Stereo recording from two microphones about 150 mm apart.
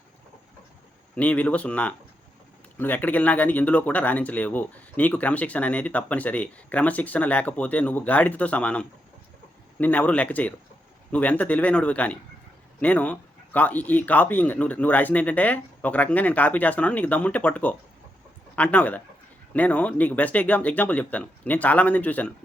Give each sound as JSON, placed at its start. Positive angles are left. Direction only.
{"t": 1.1, "sound": "speech", "side_deg": 10}